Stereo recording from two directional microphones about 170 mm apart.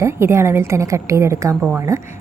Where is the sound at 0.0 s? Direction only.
15° right (ahead or behind).